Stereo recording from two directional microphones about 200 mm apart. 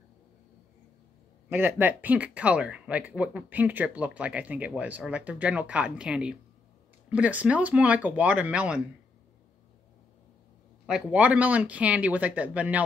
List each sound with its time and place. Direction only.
1.5 s speech: 10° right (ahead or behind)
10.9 s speech: 5° right (ahead or behind)